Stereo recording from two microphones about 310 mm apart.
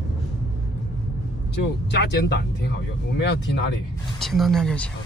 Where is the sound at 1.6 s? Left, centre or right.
Left.